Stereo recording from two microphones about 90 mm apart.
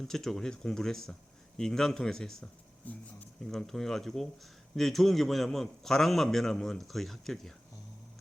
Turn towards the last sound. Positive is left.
turn(degrees=5)  # may be behind; listen again after turning